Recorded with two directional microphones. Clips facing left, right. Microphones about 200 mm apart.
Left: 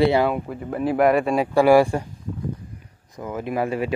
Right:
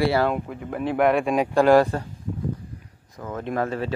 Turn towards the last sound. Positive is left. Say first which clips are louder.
# left 2 dB
turn(degrees=10)  # may be behind; listen again after turning